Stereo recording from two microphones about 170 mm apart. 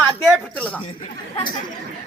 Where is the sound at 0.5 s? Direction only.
10° left (ahead or behind).